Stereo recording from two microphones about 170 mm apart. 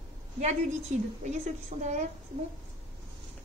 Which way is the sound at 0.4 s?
40° right (ahead or behind).